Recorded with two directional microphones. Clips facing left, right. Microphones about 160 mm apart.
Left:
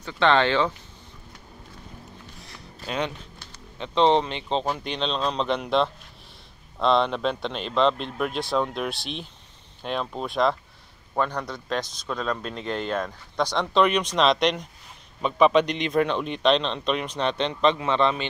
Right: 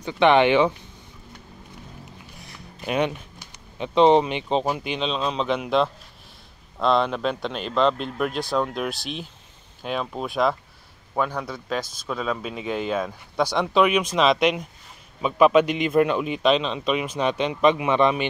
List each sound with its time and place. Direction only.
0.0 s speech: 15° right (ahead or behind)
2.4 s speech: 15° right (ahead or behind)